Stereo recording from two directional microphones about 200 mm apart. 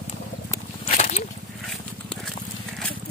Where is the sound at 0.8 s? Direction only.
35° left (ahead or behind).